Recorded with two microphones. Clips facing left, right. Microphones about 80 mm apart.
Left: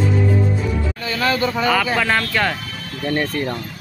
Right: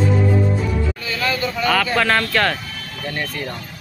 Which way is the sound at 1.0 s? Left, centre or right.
Left.